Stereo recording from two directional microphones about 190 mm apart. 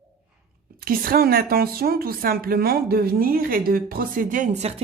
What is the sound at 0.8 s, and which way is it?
A woman's voice, 50° right (ahead or behind).